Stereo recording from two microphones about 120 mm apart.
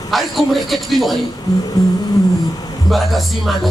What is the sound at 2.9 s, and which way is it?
Speech, centre (ahead or behind).